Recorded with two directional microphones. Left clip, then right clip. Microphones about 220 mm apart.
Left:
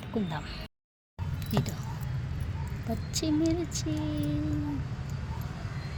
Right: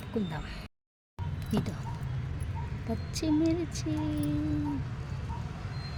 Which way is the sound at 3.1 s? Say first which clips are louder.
Even; 5° right (ahead or behind).